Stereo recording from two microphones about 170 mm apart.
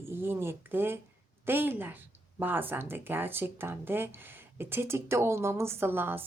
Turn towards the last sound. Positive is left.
turn(degrees=-15)  # may be behind; listen again after turning